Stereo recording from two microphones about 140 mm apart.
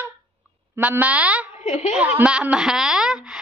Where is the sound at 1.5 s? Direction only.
60° left (ahead or behind).